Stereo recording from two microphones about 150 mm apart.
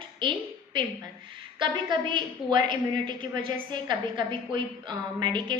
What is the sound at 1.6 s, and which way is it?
A woman's voice, 35° right (ahead or behind).